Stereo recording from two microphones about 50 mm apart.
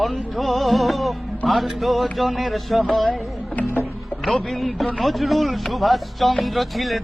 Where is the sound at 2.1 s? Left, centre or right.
Centre.